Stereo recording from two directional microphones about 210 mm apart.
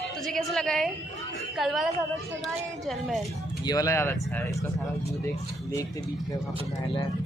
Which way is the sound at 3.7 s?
15° left (ahead or behind).